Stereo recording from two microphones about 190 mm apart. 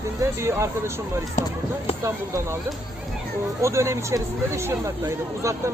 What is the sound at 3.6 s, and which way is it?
Speech, 15° right (ahead or behind).